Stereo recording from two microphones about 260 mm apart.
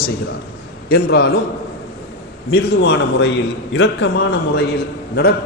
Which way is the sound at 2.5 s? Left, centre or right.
Left.